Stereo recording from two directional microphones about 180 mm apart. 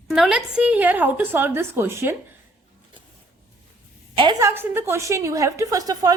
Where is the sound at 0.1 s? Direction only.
Centre (ahead or behind).